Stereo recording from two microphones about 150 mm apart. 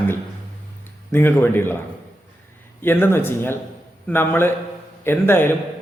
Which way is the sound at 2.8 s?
15° left (ahead or behind).